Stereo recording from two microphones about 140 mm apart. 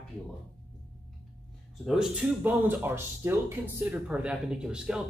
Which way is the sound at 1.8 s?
5° right (ahead or behind).